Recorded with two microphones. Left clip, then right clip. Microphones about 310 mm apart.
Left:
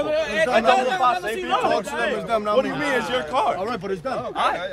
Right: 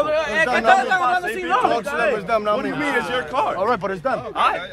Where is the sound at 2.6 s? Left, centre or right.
Centre.